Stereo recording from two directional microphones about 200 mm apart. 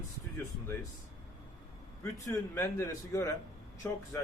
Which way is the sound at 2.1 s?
15° left (ahead or behind).